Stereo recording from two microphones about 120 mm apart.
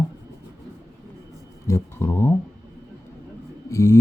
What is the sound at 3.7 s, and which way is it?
Speech, 25° left (ahead or behind).